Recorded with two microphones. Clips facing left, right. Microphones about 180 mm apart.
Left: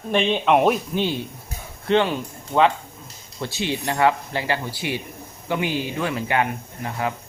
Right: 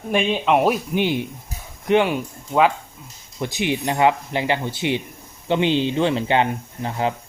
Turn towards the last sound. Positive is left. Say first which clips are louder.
# right 3 dB
turn(degrees=-25)  # may be behind; listen again after turning